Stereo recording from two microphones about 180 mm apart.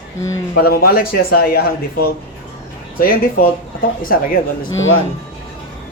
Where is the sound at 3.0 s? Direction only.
55° left (ahead or behind).